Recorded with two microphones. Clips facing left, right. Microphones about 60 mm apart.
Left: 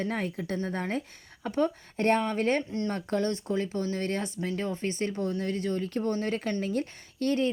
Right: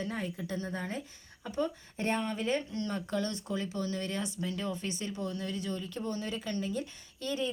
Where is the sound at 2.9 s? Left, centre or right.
Left.